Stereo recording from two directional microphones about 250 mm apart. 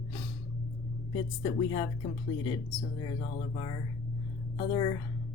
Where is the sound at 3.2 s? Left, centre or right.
Left.